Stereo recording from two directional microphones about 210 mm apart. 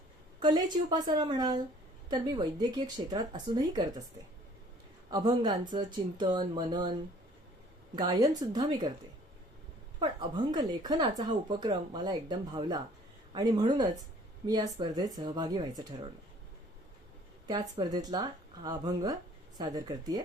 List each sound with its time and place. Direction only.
0.3 s speech: 20° right (ahead or behind)
5.1 s speech: 20° right (ahead or behind)
7.9 s speech: 20° right (ahead or behind)
10.0 s speech: 20° right (ahead or behind)
17.5 s speech: 20° right (ahead or behind)